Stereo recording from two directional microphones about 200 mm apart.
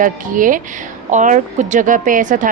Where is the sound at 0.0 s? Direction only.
40° right (ahead or behind).